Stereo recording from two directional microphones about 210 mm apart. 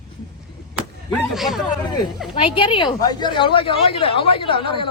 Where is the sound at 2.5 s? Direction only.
25° left (ahead or behind).